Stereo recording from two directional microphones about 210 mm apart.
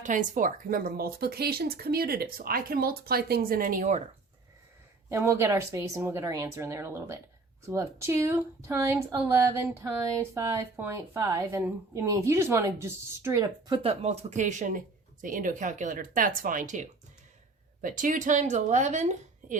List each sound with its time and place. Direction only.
0.0 s speech: 35° right (ahead or behind)
5.0 s a woman's voice: 10° right (ahead or behind); by 19.5 s 35° right (ahead or behind)